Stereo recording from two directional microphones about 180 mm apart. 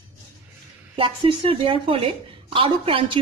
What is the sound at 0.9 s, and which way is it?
A woman's voice, 30° right (ahead or behind).